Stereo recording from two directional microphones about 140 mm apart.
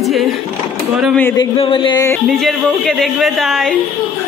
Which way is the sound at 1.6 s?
35° left (ahead or behind).